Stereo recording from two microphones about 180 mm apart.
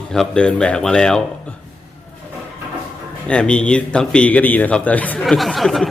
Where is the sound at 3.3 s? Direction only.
5° left (ahead or behind).